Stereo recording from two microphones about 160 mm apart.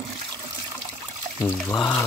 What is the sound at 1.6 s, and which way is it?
Speech, 10° left (ahead or behind).